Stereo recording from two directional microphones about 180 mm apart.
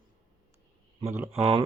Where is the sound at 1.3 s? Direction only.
35° right (ahead or behind).